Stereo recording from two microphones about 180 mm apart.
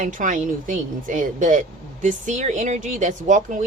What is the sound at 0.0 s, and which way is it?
A woman's voice, 45° right (ahead or behind).